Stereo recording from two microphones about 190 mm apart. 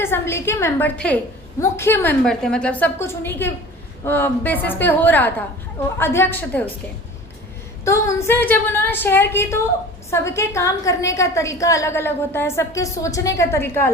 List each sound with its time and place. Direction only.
0.0 s a woman's voice: 15° left (ahead or behind)
7.9 s a woman's voice: 15° left (ahead or behind)